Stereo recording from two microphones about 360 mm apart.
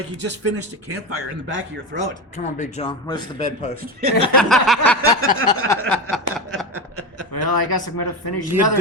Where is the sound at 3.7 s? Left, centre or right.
Right.